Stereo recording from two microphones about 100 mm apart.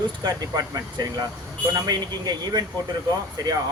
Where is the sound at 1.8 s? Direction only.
40° right (ahead or behind).